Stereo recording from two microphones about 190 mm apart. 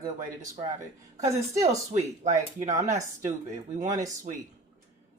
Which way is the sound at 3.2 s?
40° right (ahead or behind).